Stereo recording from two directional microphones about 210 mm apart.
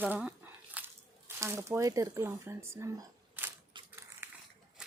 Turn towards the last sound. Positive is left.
turn(degrees=-15)  # may be behind; listen again after turning